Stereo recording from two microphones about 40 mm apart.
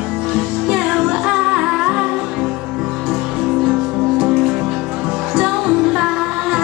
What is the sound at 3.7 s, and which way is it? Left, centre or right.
Music, right.